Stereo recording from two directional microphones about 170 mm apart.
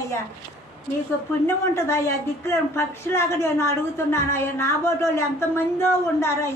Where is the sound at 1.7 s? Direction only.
15° left (ahead or behind).